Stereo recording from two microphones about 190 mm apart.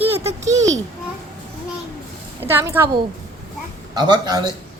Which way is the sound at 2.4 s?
10° right (ahead or behind).